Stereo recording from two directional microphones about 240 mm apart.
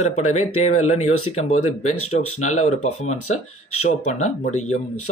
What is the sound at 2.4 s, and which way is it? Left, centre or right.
Speech, left.